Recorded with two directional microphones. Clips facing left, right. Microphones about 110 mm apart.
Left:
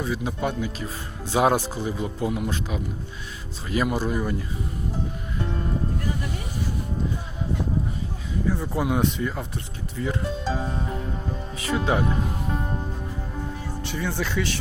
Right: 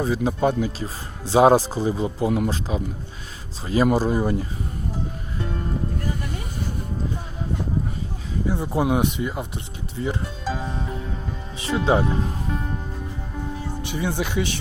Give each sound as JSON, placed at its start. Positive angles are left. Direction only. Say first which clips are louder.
{"t": 0.0, "sound": "speech", "louder": "right 6 dB", "side_deg": -30}
{"t": 3.8, "sound": "speech", "louder": "right 7 dB", "side_deg": -35}
{"t": 8.4, "sound": "speech", "louder": "right 3 dB", "side_deg": -20}
{"t": 10.5, "sound": "music", "louder": "right 2 dB", "side_deg": 5}
{"t": 11.5, "sound": "music", "louder": "right 1 dB", "side_deg": -25}
{"t": 11.9, "sound": "speech", "louder": "right 4 dB", "side_deg": -25}
{"t": 12.5, "sound": "music", "louder": "even", "side_deg": 20}
{"t": 13.8, "sound": "speech", "louder": "right 2 dB", "side_deg": -15}